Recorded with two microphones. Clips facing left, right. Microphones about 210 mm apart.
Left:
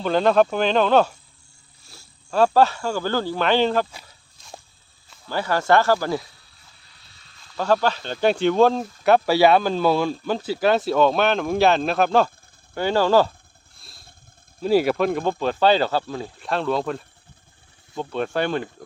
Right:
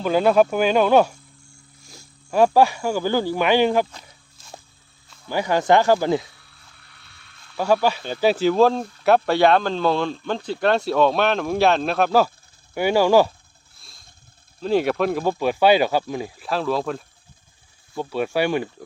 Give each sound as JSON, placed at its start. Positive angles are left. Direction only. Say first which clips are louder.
{"t": 0.0, "sound": "speech", "louder": "right 1 dB", "side_deg": -10}
{"t": 5.3, "sound": "speech", "louder": "right 2 dB", "side_deg": -15}
{"t": 6.8, "sound": "a sound", "louder": "right 2 dB", "side_deg": -60}
{"t": 7.5, "sound": "speech", "louder": "right 1 dB", "side_deg": -10}
{"t": 13.7, "sound": "motorcycle", "louder": "left 2 dB", "side_deg": 0}
{"t": 14.6, "sound": "speech", "louder": "left 1 dB", "side_deg": 5}
{"t": 16.4, "sound": "speech", "louder": "left 1 dB", "side_deg": 0}